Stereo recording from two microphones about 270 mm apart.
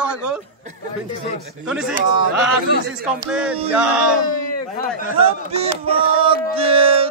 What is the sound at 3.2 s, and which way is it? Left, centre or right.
Speech, centre.